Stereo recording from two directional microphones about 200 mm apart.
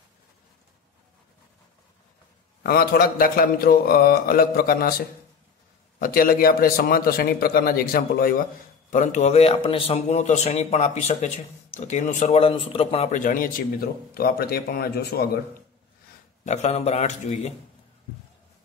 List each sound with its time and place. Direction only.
2.6 s a man's voice: 50° left (ahead or behind)
16.4 s a man's voice: 35° left (ahead or behind)